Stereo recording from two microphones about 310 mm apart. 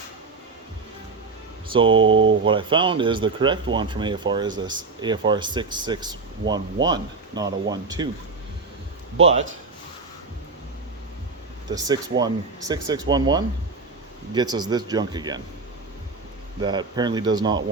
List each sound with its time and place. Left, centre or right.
1.7 s speech: centre
2.0 s speech: right
2.4 s speech: centre
11.7 s speech: centre
16.6 s speech: centre